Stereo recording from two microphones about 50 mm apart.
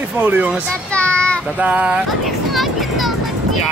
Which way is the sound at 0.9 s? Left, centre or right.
Left.